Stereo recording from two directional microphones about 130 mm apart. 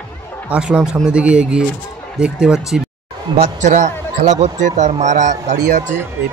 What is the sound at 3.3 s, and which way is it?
Speech, 65° right (ahead or behind).